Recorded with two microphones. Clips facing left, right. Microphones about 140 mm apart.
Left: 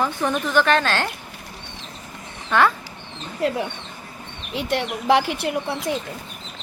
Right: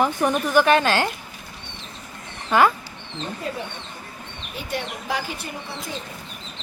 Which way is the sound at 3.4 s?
85° left.